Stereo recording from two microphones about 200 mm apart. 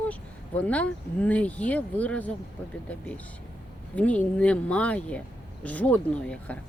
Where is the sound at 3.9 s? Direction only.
5° left (ahead or behind).